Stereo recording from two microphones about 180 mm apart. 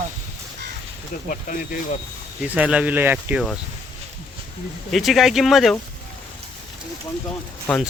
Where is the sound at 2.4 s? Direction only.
5° right (ahead or behind).